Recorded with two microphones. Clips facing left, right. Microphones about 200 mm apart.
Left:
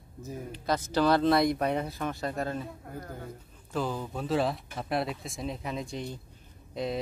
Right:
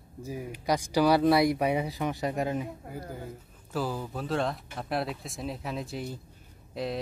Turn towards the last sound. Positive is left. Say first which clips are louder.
# even
turn(degrees=0)  # may be behind; listen again after turning